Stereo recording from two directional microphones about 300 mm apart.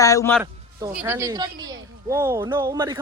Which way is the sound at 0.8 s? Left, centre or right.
Centre.